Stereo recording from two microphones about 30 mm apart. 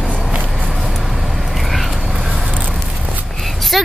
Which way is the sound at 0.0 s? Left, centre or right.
Right.